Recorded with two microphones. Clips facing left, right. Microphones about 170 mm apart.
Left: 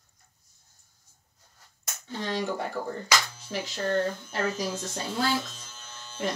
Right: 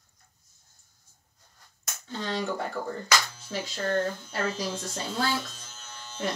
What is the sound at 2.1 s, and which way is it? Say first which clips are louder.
Speech: left 1 dB; 15° left (ahead or behind).